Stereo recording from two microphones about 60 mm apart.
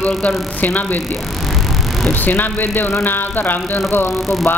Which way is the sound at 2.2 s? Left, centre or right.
Left.